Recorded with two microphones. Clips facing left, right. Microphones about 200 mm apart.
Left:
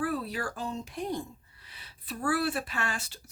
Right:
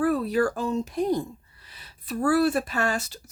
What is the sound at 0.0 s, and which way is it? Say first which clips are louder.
Speech: right 9 dB; 45° right (ahead or behind).